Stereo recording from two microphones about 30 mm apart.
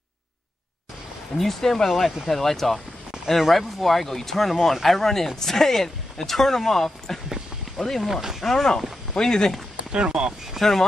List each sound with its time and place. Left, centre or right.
1.4 s speech: centre
1.9 s speech: centre
2.2 s speech: centre
8.1 s speech: centre
8.4 s speech: centre
9.1 s speech: centre
9.9 s speech: right
10.6 s speech: centre